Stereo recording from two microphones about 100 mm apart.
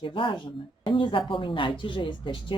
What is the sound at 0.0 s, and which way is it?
Speech, 55° left (ahead or behind).